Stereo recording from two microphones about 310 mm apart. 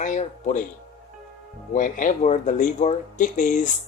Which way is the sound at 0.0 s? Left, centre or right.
Left.